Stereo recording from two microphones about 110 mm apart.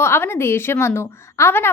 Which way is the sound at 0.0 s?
20° left (ahead or behind).